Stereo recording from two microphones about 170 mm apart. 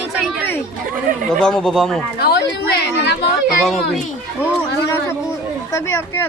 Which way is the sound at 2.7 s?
75° left (ahead or behind).